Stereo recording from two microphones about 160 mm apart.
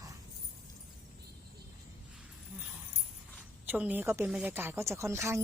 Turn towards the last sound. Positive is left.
turn(degrees=-20)  # may be behind; listen again after turning